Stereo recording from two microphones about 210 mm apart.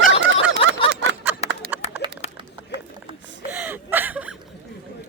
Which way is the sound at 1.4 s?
30° left (ahead or behind).